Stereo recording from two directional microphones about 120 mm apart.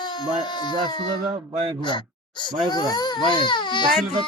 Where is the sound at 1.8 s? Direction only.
40° left (ahead or behind).